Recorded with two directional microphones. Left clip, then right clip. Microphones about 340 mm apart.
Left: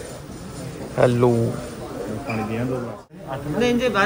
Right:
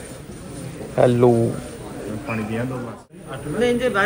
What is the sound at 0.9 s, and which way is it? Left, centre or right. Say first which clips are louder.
Speech: right 2 dB; centre.